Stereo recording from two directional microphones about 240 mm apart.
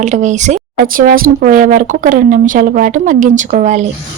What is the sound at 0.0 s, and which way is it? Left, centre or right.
Speech, right.